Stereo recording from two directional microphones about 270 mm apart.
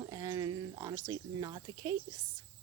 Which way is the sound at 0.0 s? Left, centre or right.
Centre.